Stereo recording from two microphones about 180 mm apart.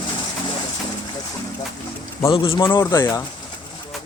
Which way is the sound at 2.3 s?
30° left (ahead or behind).